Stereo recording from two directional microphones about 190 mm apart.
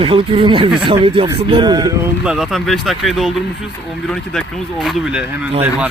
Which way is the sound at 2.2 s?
5° right (ahead or behind).